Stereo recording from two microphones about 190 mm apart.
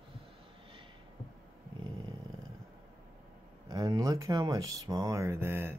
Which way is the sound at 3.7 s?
20° right (ahead or behind).